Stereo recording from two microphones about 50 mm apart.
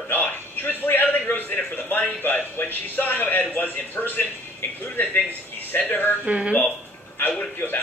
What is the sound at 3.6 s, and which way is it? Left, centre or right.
Speech, left.